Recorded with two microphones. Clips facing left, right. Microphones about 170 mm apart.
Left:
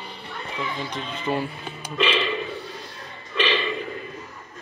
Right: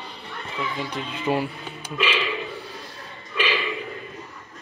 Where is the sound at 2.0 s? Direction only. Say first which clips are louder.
Left 2 dB; 5° right (ahead or behind).